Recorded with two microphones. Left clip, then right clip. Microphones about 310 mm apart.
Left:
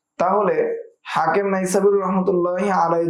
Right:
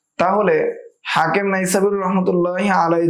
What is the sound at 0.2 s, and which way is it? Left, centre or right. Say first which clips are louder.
A man's voice: right 2 dB; right.